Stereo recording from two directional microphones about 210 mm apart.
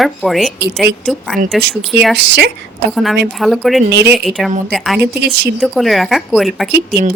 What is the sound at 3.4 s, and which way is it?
A woman's voice, centre (ahead or behind).